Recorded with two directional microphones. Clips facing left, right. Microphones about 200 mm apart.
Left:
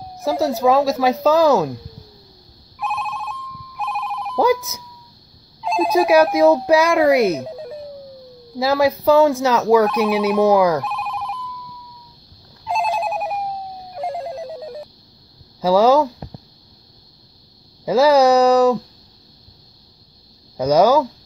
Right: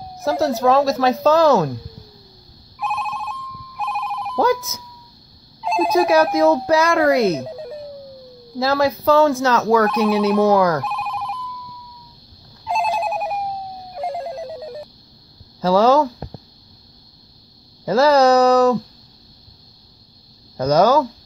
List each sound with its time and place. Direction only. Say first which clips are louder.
0.2 s speech: even; 5° left (ahead or behind)
2.8 s telephone bell ringing: even; centre (ahead or behind)
4.4 s speech: left 1 dB; 10° left (ahead or behind)
5.6 s speech: even; centre (ahead or behind)
7.4 s music: even; centre (ahead or behind)
8.5 s speech: left 1 dB; 10° left (ahead or behind)
10.8 s telephone bell ringing: even; centre (ahead or behind)
12.6 s telephone bell ringing: even; centre (ahead or behind)
15.6 s speech: left 1 dB; 10° left (ahead or behind)
17.8 s speech: left 1 dB; 10° left (ahead or behind)
20.5 s speech: left 1 dB; 10° left (ahead or behind)